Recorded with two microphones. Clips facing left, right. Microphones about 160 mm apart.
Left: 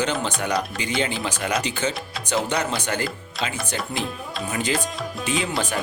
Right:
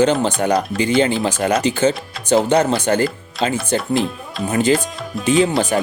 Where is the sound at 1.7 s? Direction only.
45° right (ahead or behind).